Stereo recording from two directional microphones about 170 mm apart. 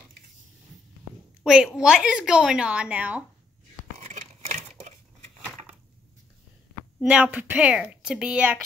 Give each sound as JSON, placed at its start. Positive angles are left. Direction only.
{"t": 1.4, "sound": "a woman's voice", "side_deg": -5}
{"t": 4.0, "sound": "a sound", "side_deg": -45}
{"t": 7.0, "sound": "a woman's voice", "side_deg": -5}